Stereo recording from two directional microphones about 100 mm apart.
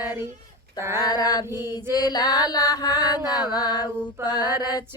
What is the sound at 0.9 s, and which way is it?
Music, 40° left (ahead or behind).